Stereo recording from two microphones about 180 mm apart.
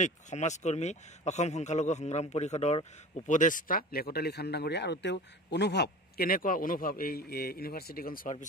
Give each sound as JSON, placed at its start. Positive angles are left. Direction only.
{"t": 0.0, "sound": "speech", "side_deg": 40}